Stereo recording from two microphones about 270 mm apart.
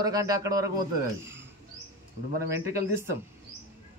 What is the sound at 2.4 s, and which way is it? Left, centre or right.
Speech, centre.